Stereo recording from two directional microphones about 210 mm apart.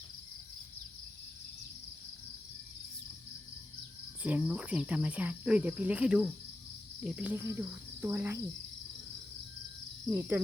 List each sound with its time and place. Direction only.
4.2 s cricket: 5° right (ahead or behind)
10.1 s cricket: 10° right (ahead or behind)